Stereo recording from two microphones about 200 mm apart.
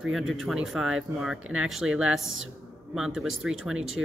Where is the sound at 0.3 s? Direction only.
Centre (ahead or behind).